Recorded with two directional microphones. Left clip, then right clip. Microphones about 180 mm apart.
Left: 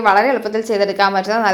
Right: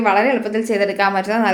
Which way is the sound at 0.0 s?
Centre (ahead or behind).